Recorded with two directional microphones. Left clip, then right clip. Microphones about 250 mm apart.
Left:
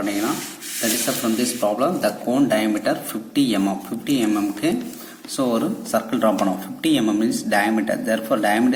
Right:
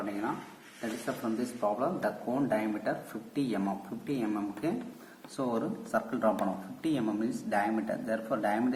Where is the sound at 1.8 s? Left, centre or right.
Left.